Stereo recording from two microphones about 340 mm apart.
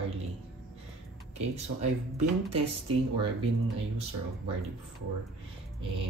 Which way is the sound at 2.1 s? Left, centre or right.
Centre.